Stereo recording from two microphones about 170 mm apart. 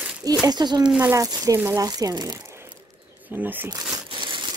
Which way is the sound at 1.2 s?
20° right (ahead or behind).